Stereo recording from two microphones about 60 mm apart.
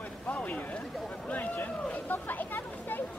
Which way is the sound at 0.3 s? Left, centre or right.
Left.